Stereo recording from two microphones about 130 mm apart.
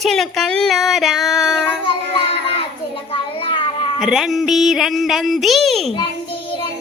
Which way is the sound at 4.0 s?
5° right (ahead or behind).